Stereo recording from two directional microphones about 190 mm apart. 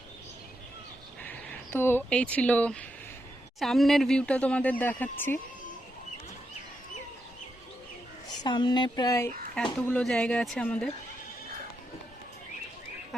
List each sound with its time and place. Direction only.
1.2 s speech: 10° left (ahead or behind)
8.4 s speech: 25° left (ahead or behind)
9.8 s speech: 5° left (ahead or behind)